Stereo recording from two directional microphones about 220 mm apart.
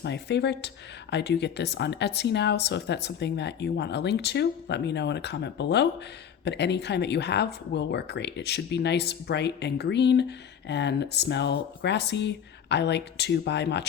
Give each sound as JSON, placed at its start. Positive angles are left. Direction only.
{"t": 0.0, "sound": "speech", "side_deg": 50}